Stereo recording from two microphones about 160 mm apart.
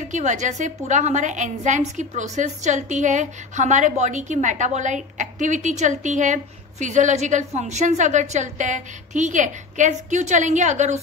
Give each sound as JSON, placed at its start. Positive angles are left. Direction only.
{"t": 0.1, "sound": "a woman's voice", "side_deg": -50}